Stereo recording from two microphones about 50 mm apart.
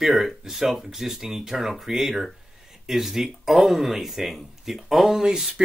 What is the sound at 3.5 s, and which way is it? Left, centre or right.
Speech, centre.